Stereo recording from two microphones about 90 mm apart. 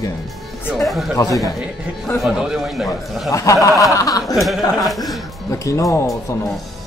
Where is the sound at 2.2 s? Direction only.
10° right (ahead or behind).